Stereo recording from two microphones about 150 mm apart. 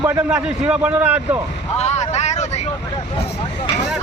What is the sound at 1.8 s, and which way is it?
Speech, 50° left (ahead or behind).